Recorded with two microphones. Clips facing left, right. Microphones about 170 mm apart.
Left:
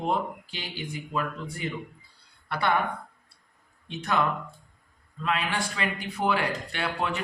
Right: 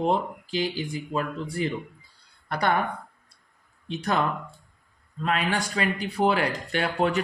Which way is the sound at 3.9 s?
35° right (ahead or behind).